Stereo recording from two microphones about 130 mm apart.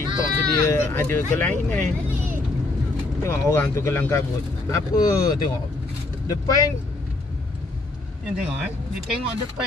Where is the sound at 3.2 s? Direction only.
20° left (ahead or behind).